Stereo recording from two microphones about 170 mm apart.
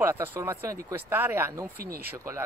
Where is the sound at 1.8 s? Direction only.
65° right (ahead or behind).